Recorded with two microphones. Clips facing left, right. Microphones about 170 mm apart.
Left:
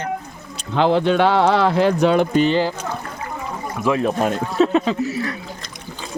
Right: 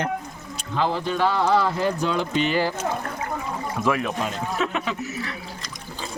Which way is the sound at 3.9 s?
30° left (ahead or behind).